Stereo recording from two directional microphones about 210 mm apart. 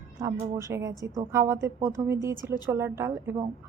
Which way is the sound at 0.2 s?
15° right (ahead or behind).